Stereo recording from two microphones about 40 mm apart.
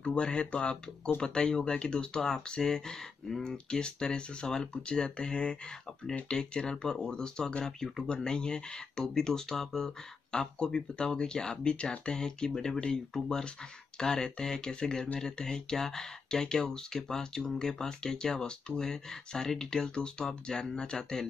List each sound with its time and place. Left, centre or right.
0.0 s speech: left